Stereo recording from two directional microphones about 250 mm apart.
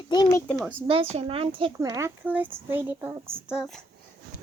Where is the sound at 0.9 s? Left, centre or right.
Right; by 3.8 s centre.